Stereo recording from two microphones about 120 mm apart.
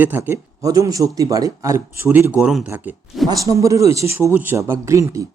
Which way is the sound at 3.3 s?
30° right (ahead or behind).